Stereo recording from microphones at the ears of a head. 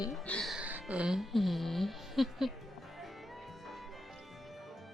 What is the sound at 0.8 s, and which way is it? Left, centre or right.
Speech, centre.